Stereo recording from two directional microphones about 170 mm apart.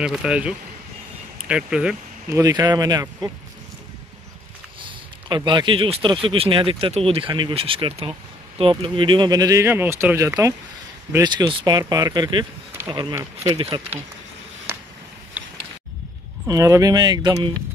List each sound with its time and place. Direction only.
0.0 s speech: 5° right (ahead or behind)
2.3 s speech: 20° right (ahead or behind)
4.8 s speech: 25° right (ahead or behind)
13.6 s speech: 25° right (ahead or behind)
15.4 s a sound: 10° right (ahead or behind)
16.4 s speech: 20° right (ahead or behind)